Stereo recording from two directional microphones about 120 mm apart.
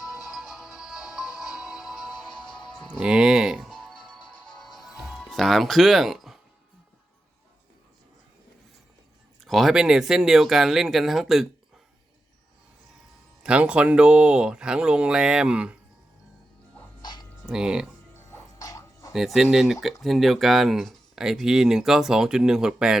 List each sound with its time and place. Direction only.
0.0 s music: 5° right (ahead or behind)
5.2 s speech: 5° left (ahead or behind)
9.4 s speech: centre (ahead or behind)
13.4 s speech: 10° right (ahead or behind)
17.0 s a sound: 40° left (ahead or behind)
17.4 s speech: 5° right (ahead or behind)
18.3 s a sound: 25° left (ahead or behind)
19.1 s speech: centre (ahead or behind)